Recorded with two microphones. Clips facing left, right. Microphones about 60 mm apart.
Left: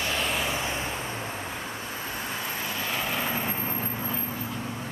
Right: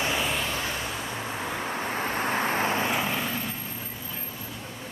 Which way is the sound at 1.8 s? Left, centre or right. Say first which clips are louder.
Right 6 dB; right.